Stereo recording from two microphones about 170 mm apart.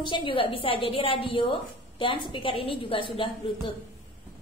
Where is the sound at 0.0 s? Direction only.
30° left (ahead or behind).